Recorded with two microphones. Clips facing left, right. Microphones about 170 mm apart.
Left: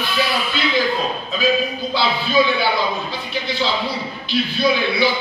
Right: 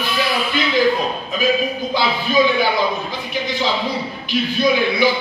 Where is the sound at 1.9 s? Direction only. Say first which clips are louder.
Even; 15° right (ahead or behind).